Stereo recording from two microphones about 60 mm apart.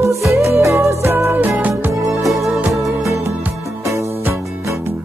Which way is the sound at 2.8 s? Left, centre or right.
Right.